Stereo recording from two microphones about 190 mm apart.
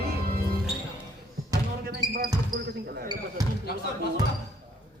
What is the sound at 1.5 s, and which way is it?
Basketball bounce, 55° right (ahead or behind).